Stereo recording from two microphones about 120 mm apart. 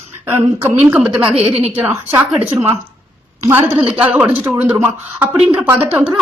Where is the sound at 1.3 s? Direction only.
55° right (ahead or behind).